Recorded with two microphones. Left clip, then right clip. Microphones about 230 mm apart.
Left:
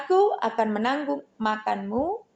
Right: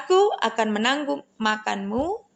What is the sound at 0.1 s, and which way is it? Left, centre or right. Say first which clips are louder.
Speech: right 2 dB; right.